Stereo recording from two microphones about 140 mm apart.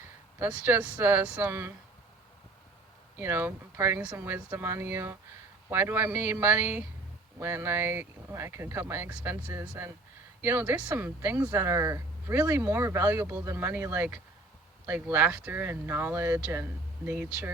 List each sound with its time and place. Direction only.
0.3 s speech: 10° right (ahead or behind)
3.2 s speech: 15° right (ahead or behind)